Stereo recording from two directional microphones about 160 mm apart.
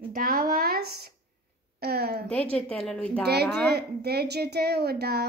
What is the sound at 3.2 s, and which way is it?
A woman's voice, 90° right.